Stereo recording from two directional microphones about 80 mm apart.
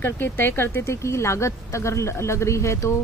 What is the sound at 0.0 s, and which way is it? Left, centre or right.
Speech, left.